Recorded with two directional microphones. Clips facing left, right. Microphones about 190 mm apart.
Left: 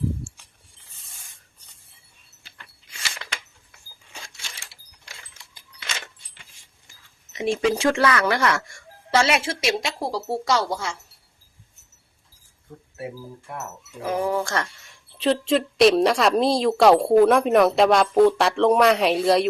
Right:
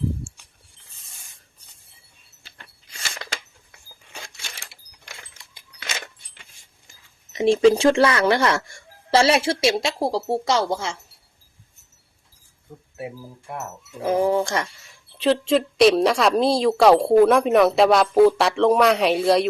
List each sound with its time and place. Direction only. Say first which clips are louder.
2.4 s a sound: right 1 dB; 40° right (ahead or behind)
7.3 s speech: right 7 dB; 30° right (ahead or behind)
14.0 s speech: right 4 dB; 25° right (ahead or behind)
15.1 s a woman's voice: right 2 dB; centre (ahead or behind)